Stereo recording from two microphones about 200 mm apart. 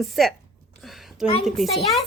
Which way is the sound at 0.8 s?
Centre (ahead or behind).